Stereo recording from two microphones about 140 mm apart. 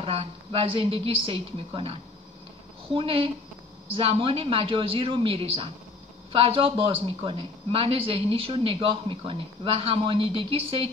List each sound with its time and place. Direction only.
0.0 s a woman's voice: 45° right (ahead or behind)